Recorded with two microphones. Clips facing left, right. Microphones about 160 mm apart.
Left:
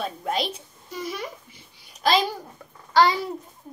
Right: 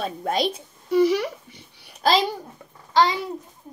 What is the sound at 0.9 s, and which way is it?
Speech, 75° right (ahead or behind).